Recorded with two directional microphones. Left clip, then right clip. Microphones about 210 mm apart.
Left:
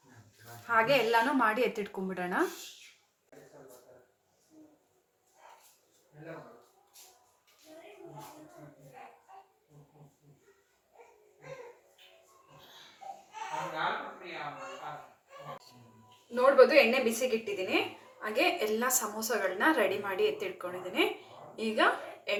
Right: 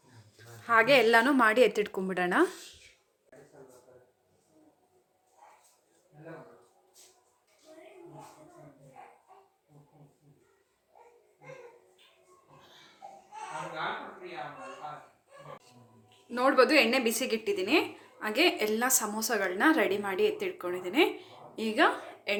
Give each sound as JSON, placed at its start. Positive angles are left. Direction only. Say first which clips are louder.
{"t": 0.7, "sound": "a woman's voice", "louder": "right 4 dB", "side_deg": -45}
{"t": 16.3, "sound": "a woman's voice", "louder": "left 2 dB", "side_deg": -40}